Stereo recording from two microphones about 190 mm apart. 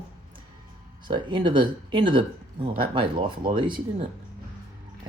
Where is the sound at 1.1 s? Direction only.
25° right (ahead or behind).